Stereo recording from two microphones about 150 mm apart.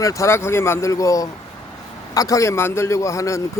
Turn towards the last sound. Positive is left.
turn(degrees=20)  # may be behind; listen again after turning